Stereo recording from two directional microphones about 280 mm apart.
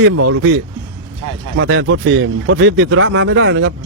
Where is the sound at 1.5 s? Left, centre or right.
Right.